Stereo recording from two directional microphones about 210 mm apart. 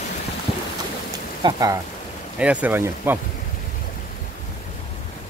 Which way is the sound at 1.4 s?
15° right (ahead or behind).